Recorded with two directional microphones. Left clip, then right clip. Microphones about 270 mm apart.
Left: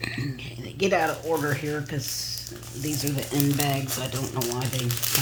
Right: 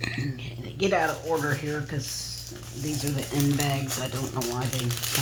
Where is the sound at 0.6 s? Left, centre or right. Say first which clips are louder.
Left 1 dB; centre.